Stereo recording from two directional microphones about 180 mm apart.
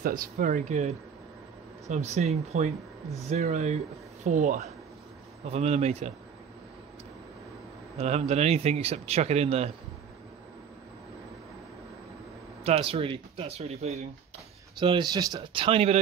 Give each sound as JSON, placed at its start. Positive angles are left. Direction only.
{"t": 0.0, "sound": "speech", "side_deg": -50}
{"t": 8.0, "sound": "speech", "side_deg": -35}
{"t": 12.6, "sound": "speech", "side_deg": -35}
{"t": 14.8, "sound": "speech", "side_deg": -25}